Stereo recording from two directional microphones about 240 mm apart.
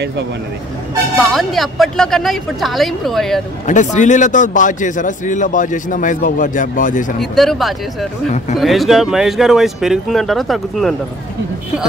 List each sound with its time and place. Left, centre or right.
1.2 s speech: centre
3.6 s a man's voice: left
7.3 s speech: centre